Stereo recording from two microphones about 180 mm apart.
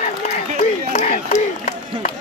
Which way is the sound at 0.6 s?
40° left (ahead or behind).